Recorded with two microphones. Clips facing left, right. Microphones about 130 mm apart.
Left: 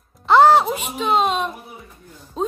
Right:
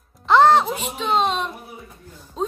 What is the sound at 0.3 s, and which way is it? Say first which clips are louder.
Music: left 2 dB; 5° left (ahead or behind).